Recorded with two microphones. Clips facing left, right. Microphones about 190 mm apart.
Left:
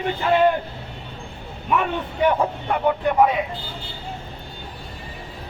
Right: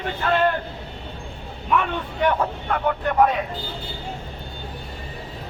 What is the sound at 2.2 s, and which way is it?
A man's voice, 10° left (ahead or behind).